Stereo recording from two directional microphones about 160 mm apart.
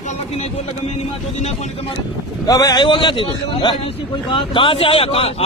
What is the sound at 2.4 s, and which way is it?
A man's voice, 25° left (ahead or behind).